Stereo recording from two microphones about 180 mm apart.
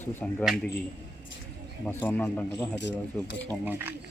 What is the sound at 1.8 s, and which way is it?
A man's voice, 10° left (ahead or behind).